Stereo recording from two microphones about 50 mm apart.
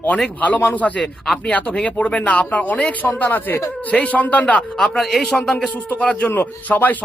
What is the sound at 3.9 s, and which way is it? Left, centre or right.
Speech, left.